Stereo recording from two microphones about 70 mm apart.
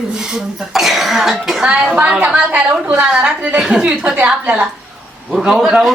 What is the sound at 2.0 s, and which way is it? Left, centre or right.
Speech, centre.